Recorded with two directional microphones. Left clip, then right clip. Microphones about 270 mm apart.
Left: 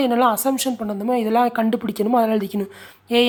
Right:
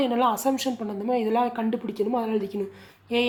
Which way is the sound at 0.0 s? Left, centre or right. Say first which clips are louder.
Left 5 dB; left.